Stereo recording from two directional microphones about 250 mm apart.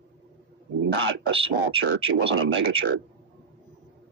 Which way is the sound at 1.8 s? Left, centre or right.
Right.